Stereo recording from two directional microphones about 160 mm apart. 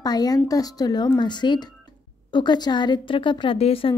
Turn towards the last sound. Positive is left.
turn(degrees=40)  # may be behind; listen again after turning